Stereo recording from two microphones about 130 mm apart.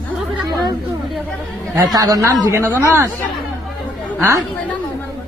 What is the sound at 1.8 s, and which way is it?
Speech, 30° right (ahead or behind).